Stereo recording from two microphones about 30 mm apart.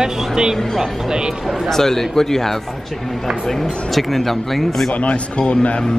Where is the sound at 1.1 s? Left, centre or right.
Right.